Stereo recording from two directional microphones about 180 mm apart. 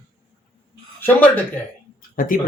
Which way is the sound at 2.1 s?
50° left (ahead or behind).